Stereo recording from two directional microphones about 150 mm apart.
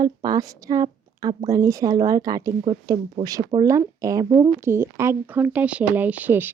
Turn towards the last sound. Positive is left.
turn(degrees=-10)  # may be behind; listen again after turning